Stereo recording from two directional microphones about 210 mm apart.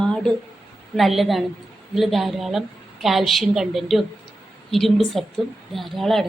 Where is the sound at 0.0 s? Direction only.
5° left (ahead or behind).